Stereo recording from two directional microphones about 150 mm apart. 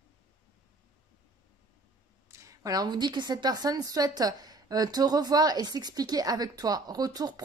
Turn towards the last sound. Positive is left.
turn(degrees=-25)  # may be behind; listen again after turning